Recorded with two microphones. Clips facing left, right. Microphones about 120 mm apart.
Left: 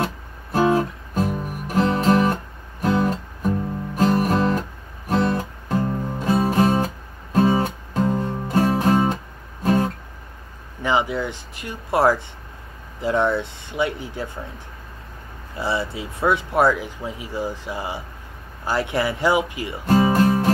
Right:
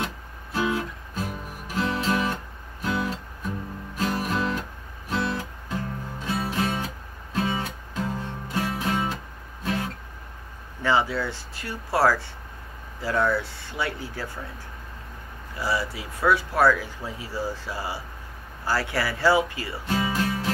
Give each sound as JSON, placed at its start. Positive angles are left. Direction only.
{"t": 0.0, "sound": "music", "side_deg": 45}
{"t": 10.8, "sound": "speech", "side_deg": 15}
{"t": 15.5, "sound": "speech", "side_deg": 25}
{"t": 19.9, "sound": "music", "side_deg": 45}